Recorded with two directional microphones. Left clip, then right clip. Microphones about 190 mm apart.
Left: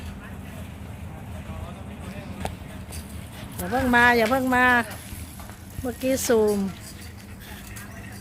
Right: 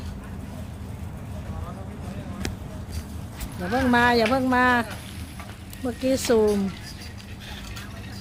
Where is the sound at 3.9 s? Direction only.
5° left (ahead or behind).